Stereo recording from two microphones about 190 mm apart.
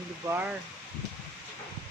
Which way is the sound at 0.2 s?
15° right (ahead or behind).